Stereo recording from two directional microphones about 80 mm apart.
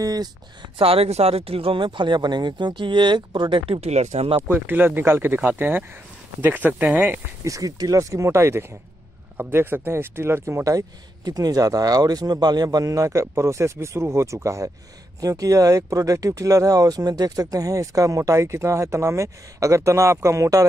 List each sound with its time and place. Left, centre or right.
0.0 s speech: right
1.7 s speech: right
4.4 s speech: right
7.4 s speech: right